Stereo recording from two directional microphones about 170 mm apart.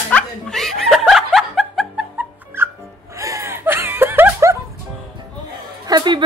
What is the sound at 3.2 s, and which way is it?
Chuckle, 20° right (ahead or behind).